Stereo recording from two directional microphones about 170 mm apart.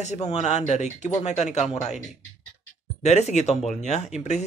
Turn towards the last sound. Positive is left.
turn(degrees=40)  # may be behind; listen again after turning